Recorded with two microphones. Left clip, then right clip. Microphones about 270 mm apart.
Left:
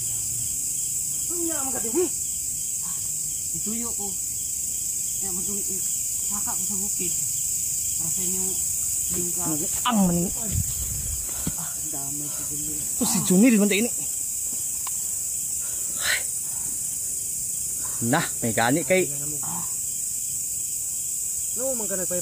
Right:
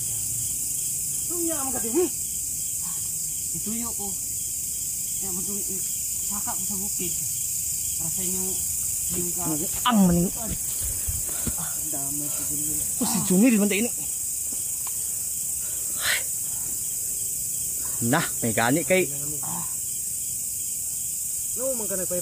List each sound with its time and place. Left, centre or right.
1.5 s speech: centre
3.6 s cricket: centre
6.3 s cricket: centre
9.4 s speech: centre
13.0 s speech: left
18.0 s cricket: centre
21.5 s speech: left